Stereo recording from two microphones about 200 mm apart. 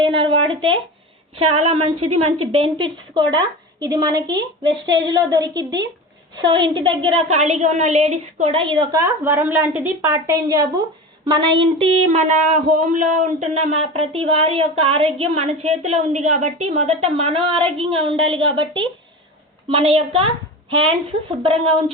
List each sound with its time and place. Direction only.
0.0 s a sound: 25° right (ahead or behind)
1.4 s a woman's voice: 30° right (ahead or behind)
9.0 s a woman's voice: 10° right (ahead or behind)
12.1 s a woman's voice: 35° right (ahead or behind)